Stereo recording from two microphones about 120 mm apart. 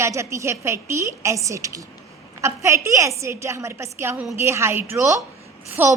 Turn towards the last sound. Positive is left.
turn(degrees=-15)  # may be behind; listen again after turning